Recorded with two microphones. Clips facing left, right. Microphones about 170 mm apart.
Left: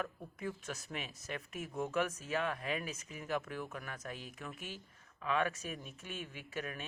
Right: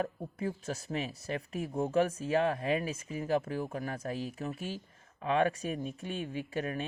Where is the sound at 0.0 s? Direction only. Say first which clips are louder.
Right 6 dB; 35° right (ahead or behind).